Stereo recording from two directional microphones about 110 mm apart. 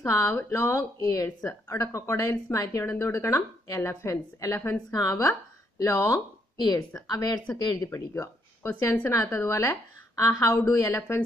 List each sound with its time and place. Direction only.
0.0 s speech: 25° left (ahead or behind)
6.7 s a woman's voice: 30° left (ahead or behind)